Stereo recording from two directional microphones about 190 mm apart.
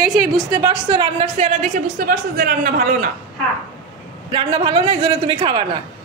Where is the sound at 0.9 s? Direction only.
30° right (ahead or behind); by 3.0 s 45° right (ahead or behind).